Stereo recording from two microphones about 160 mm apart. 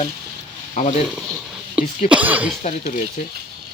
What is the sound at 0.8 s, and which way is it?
Speech, 50° left (ahead or behind).